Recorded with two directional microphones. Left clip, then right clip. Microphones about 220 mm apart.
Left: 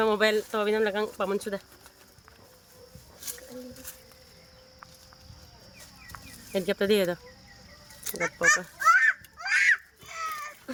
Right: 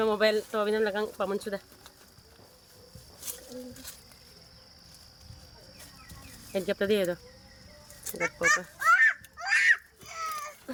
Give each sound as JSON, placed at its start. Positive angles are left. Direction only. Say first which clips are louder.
{"t": 0.0, "sound": "speech", "louder": "left 1 dB", "side_deg": 15}
{"t": 6.5, "sound": "speech", "louder": "left 2 dB", "side_deg": 25}
{"t": 8.2, "sound": "a sound", "louder": "left 2 dB", "side_deg": 0}